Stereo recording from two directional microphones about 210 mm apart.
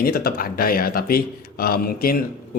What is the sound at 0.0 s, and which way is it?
A man's voice, 45° left (ahead or behind).